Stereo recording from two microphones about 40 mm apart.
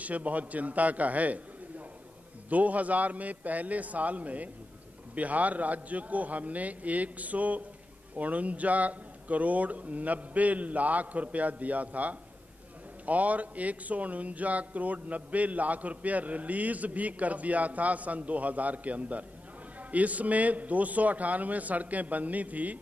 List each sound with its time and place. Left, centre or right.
0.0 s speech: right
2.5 s speech: right